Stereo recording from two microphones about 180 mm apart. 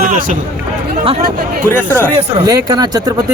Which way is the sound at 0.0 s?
50° right (ahead or behind).